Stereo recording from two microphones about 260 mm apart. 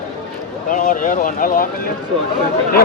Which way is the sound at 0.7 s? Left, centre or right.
Left.